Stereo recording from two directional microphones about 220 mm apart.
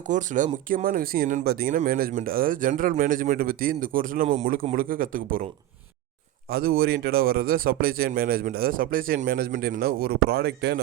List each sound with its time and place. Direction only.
0.1 s speech: 35° right (ahead or behind)
6.5 s speech: 45° right (ahead or behind)